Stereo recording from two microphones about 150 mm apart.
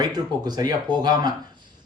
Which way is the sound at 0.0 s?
30° right (ahead or behind).